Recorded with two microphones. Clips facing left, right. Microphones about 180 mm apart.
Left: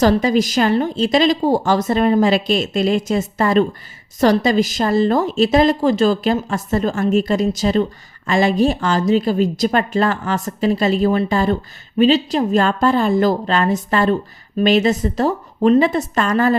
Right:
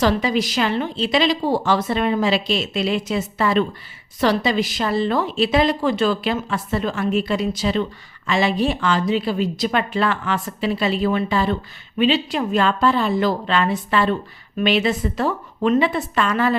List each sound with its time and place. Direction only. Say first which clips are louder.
0.0 s a woman's voice: left 4 dB; 45° left (ahead or behind)